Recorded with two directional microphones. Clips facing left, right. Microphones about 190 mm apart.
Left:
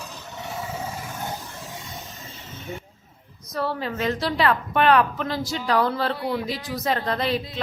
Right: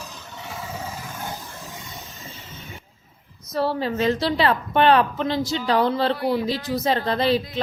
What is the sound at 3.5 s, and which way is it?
A woman's voice, 30° right (ahead or behind).